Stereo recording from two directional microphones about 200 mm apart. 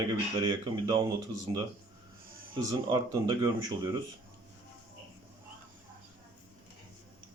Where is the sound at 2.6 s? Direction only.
20° right (ahead or behind).